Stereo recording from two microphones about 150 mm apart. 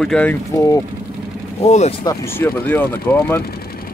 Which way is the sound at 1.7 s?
45° left (ahead or behind).